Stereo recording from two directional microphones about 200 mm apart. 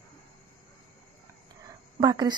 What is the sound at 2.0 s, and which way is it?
Speech, 20° right (ahead or behind).